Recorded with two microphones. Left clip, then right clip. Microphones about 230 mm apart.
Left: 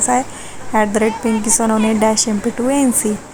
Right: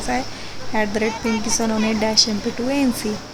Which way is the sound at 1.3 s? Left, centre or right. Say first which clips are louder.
Left 5 dB; centre.